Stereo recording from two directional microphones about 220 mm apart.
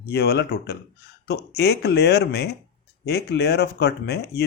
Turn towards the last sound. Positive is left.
turn(degrees=50)  # may be behind; listen again after turning